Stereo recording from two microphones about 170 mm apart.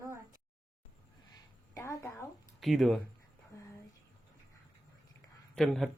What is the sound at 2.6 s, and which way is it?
Speech, centre (ahead or behind).